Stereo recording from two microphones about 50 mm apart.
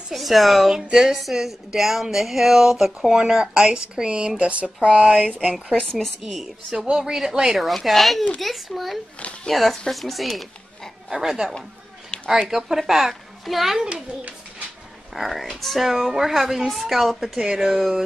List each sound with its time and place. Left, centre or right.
0.1 s a woman's voice: centre; by 5.6 s right
5.9 s a woman's voice: centre
11.1 s speech: centre
15.1 s a woman's voice: centre
17.7 s a woman's voice: centre